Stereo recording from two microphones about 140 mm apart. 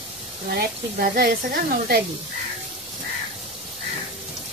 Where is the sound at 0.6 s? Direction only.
90° right.